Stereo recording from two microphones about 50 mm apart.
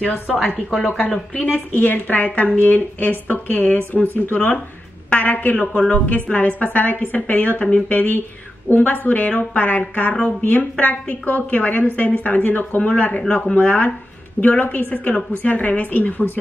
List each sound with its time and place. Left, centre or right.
0.7 s speech: centre
1.5 s a woman's voice: left
7.9 s a woman's voice: left